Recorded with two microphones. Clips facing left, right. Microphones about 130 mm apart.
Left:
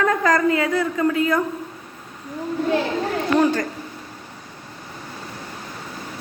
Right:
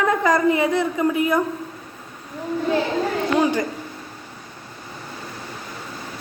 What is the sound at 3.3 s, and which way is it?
Speech, 10° right (ahead or behind).